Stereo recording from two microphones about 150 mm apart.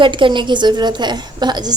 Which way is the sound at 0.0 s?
35° right (ahead or behind).